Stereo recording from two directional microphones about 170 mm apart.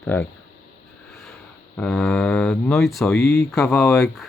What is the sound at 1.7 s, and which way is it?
Speech, 5° left (ahead or behind).